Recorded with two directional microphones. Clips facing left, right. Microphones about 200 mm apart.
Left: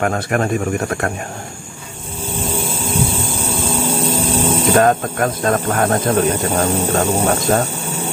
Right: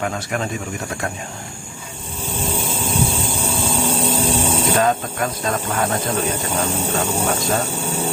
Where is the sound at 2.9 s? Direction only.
30° left (ahead or behind).